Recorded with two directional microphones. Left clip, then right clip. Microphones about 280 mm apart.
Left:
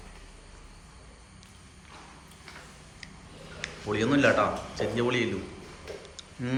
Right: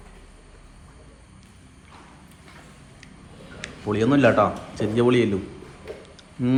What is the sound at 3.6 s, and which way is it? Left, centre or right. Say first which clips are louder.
A man's voice: right 5 dB; centre.